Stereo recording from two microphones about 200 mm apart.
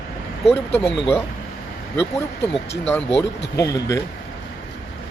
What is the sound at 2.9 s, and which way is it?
Speech, 15° left (ahead or behind).